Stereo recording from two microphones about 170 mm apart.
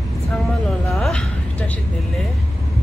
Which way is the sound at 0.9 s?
5° left (ahead or behind).